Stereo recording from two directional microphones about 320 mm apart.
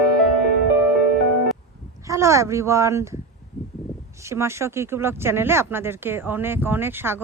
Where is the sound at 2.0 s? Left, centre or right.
Centre.